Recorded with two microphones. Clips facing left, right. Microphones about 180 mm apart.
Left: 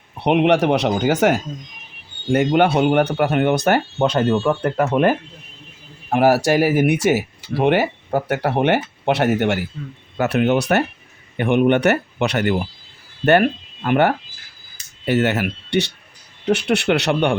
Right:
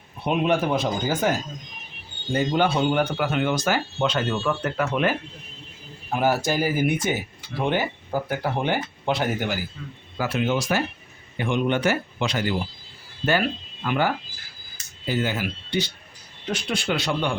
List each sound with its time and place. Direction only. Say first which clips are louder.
0.2 s speech: left 7 dB; 70° left (ahead or behind)
3.9 s speech: left 7 dB; 50° left (ahead or behind)
6.1 s speech: left 7 dB; 75° left (ahead or behind); by 14.1 s 55° left (ahead or behind)
15.0 s speech: left 7 dB; 70° left (ahead or behind)